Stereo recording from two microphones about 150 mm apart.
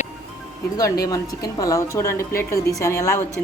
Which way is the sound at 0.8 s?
25° left (ahead or behind).